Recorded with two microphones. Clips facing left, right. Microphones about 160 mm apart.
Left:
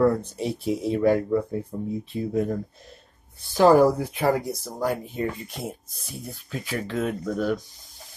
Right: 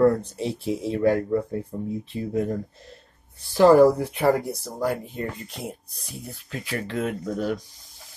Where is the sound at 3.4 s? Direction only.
20° left (ahead or behind).